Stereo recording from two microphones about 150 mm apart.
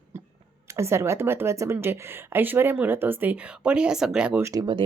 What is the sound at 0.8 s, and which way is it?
A woman's voice, 20° right (ahead or behind).